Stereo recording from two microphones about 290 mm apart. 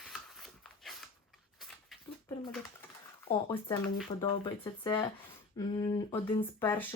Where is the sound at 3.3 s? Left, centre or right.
Centre.